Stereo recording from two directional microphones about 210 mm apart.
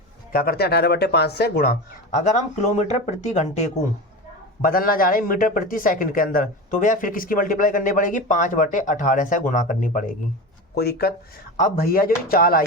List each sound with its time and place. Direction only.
0.3 s speech: 45° left (ahead or behind)
2.1 s speech: 35° left (ahead or behind)